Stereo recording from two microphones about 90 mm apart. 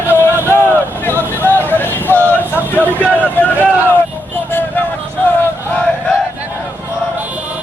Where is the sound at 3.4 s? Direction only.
20° left (ahead or behind).